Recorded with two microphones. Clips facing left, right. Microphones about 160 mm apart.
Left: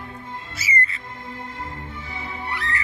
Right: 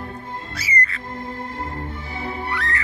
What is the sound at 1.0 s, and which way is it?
Music, 40° right (ahead or behind).